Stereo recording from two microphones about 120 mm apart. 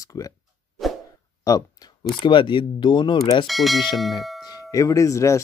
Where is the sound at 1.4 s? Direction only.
30° left (ahead or behind).